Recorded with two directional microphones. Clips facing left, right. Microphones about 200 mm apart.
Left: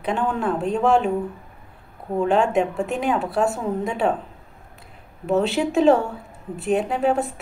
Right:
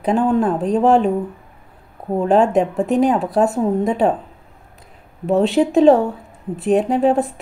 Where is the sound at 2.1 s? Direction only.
35° right (ahead or behind).